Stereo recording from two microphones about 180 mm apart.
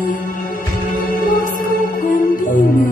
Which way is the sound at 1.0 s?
50° left (ahead or behind).